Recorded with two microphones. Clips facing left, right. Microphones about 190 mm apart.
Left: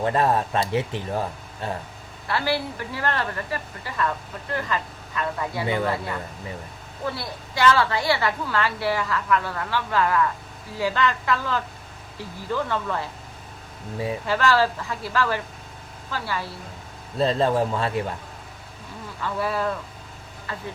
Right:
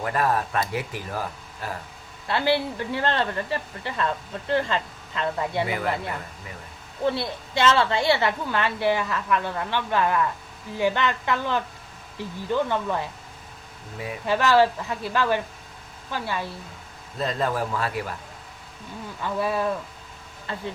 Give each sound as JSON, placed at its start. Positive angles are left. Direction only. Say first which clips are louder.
{"t": 0.0, "sound": "speech", "louder": "left 3 dB", "side_deg": 25}
{"t": 2.2, "sound": "a woman's voice", "louder": "right 2 dB", "side_deg": -20}
{"t": 5.6, "sound": "speech", "louder": "left 3 dB", "side_deg": 30}
{"t": 7.0, "sound": "a woman's voice", "louder": "right 5 dB", "side_deg": -25}
{"t": 14.3, "sound": "a woman's voice", "louder": "right 3 dB", "side_deg": -20}
{"t": 17.2, "sound": "speech", "louder": "left 5 dB", "side_deg": 30}
{"t": 19.2, "sound": "a woman's voice", "louder": "right 1 dB", "side_deg": -20}